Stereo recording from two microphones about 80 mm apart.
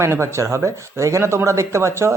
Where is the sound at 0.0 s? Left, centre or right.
Right.